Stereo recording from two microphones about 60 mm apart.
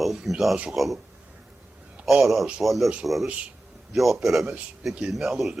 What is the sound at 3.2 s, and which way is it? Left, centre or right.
Speech, right.